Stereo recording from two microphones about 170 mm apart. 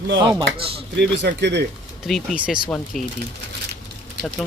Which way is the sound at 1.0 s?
90° right.